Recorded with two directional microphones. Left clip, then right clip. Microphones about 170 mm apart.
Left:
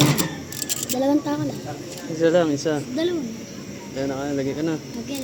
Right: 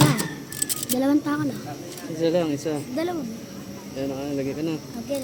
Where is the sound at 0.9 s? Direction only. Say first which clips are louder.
Left 1 dB; 65° right (ahead or behind).